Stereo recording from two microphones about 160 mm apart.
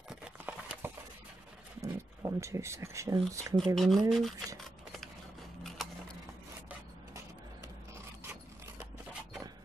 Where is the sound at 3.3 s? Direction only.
20° right (ahead or behind).